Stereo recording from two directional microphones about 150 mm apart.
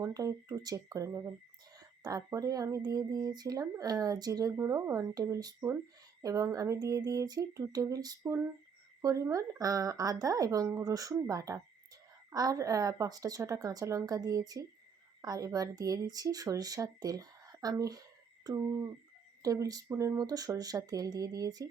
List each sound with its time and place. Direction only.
0.0 s speech: 25° right (ahead or behind)